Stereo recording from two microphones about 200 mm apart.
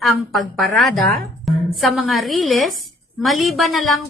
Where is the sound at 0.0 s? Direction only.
Centre (ahead or behind).